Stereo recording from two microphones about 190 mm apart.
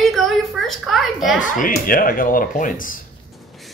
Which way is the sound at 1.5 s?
45° left (ahead or behind).